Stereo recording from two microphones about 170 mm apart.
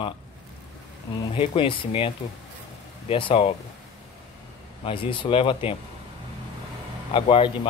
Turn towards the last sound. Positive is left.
turn(degrees=30)  # may be behind; listen again after turning